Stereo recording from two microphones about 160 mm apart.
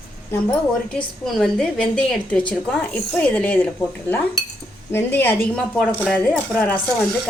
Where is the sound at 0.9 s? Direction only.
5° left (ahead or behind).